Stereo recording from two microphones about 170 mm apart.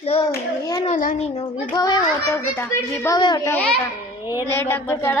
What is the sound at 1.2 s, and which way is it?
Child singing, 35° left (ahead or behind).